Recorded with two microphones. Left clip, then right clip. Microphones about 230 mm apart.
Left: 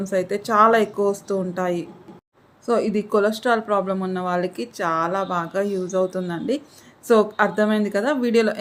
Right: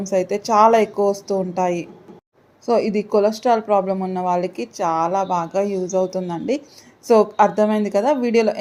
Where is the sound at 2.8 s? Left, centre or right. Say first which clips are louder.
Right 3 dB; left.